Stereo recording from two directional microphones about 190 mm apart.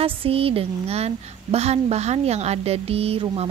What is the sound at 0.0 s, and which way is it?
Speech, 30° right (ahead or behind).